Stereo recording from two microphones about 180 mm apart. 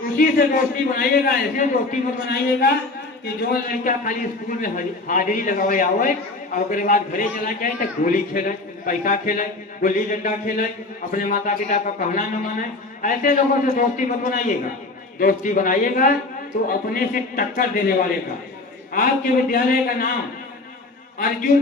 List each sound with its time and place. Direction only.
0.2 s a man's voice: 55° left (ahead or behind)
18.9 s a man's voice: 55° left (ahead or behind)